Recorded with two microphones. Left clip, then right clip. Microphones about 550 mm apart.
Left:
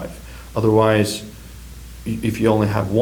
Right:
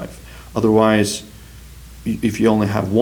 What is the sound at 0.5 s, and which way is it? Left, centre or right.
Speech, right.